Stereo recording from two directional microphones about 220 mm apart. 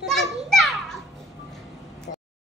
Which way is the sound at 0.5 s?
Centre (ahead or behind).